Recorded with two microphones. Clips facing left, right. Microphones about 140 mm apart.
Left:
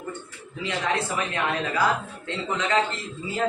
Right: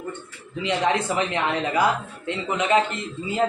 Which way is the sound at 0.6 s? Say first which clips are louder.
Right 4 dB; 20° right (ahead or behind).